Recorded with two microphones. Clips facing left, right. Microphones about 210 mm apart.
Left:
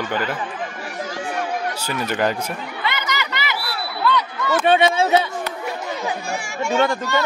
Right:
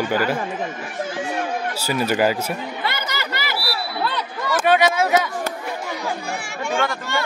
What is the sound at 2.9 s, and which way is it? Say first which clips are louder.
Chatter: left 1 dB; 45° right (ahead or behind).